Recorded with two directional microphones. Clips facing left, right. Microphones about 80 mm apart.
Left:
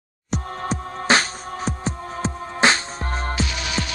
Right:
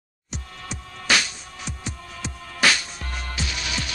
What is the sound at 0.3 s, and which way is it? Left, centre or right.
Music, left.